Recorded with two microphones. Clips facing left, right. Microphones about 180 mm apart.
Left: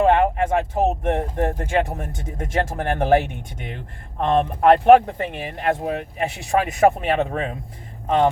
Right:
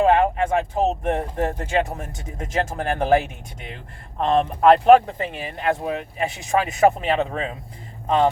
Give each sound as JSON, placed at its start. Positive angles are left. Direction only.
{"t": 0.0, "sound": "speech", "side_deg": 55}
{"t": 4.2, "sound": "speech", "side_deg": 55}